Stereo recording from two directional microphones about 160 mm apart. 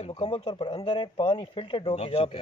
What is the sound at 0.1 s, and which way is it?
Speech, 30° left (ahead or behind).